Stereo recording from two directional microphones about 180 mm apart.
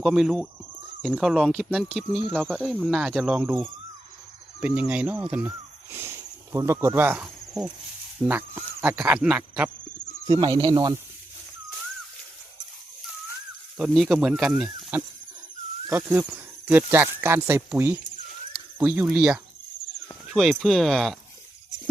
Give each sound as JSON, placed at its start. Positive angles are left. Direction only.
{"t": 0.0, "sound": "speech", "side_deg": 0}
{"t": 10.3, "sound": "speech", "side_deg": -25}
{"t": 13.7, "sound": "speech", "side_deg": -5}